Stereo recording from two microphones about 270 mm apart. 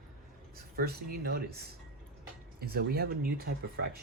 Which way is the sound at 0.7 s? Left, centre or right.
Right.